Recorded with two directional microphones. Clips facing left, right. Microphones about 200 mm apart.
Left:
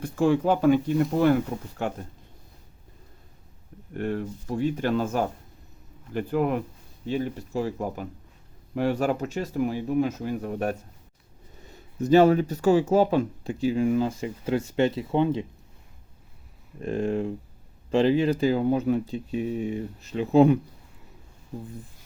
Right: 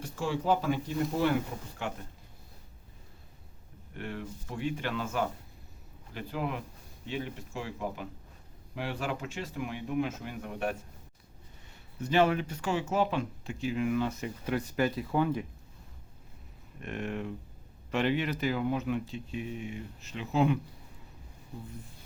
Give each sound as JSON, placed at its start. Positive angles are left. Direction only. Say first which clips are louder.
{"t": 0.0, "sound": "speech", "louder": "left 10 dB", "side_deg": 55}
{"t": 1.8, "sound": "speech", "louder": "left 7 dB", "side_deg": 45}
{"t": 3.9, "sound": "speech", "louder": "left 10 dB", "side_deg": 45}
{"t": 7.0, "sound": "speech", "louder": "left 8 dB", "side_deg": 40}
{"t": 11.9, "sound": "speech", "louder": "left 9 dB", "side_deg": 40}
{"t": 16.8, "sound": "speech", "louder": "left 9 dB", "side_deg": 30}